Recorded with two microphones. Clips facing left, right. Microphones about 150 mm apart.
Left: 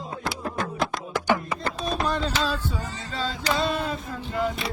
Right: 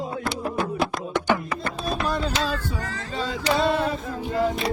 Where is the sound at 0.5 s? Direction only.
5° right (ahead or behind).